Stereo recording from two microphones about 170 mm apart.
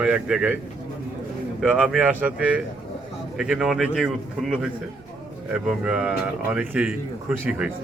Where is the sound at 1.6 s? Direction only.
Centre (ahead or behind).